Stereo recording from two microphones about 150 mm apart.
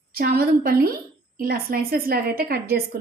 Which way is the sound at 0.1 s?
90° right.